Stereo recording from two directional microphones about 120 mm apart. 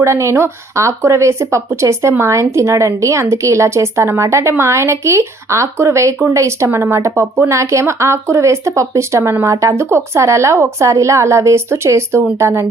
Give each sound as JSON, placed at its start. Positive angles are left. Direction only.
{"t": 0.0, "sound": "speech", "side_deg": -25}